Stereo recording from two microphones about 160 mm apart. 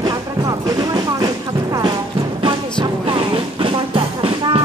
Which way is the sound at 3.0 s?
35° right (ahead or behind).